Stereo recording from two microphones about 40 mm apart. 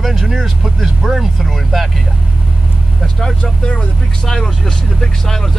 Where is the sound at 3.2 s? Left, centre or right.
Left.